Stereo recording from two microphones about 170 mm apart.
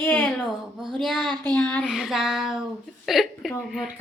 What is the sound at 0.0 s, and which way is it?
Speech, 5° left (ahead or behind).